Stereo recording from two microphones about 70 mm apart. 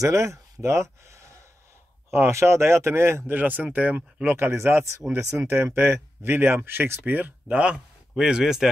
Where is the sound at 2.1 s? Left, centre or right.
Right.